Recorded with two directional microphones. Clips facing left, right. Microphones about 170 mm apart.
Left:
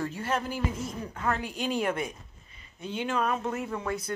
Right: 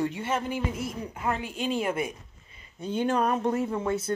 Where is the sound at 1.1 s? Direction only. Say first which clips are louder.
Left 1 dB; 15° right (ahead or behind).